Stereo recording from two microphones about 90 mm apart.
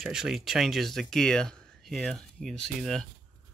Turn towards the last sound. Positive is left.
turn(degrees=5)  # may be behind; listen again after turning